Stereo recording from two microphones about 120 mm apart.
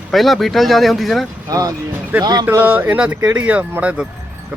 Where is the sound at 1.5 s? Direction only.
30° right (ahead or behind).